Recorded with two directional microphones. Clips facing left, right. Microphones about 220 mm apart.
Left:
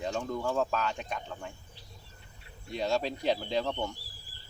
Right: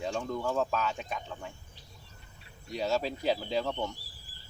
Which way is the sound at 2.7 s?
5° right (ahead or behind).